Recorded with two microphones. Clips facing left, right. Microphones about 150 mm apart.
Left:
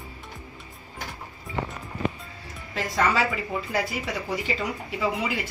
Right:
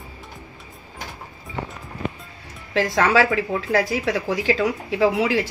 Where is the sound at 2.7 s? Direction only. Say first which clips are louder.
Right 6 dB; 85° right.